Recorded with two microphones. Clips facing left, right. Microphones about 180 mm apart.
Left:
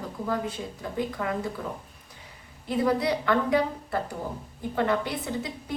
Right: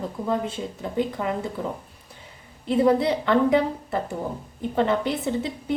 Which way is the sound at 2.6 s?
25° right (ahead or behind).